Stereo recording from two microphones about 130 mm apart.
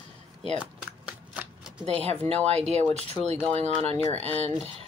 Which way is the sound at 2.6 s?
55° right (ahead or behind).